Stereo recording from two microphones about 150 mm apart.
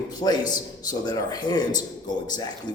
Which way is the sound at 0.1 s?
25° left (ahead or behind).